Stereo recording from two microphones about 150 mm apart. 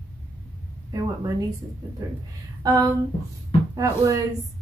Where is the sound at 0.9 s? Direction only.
25° right (ahead or behind).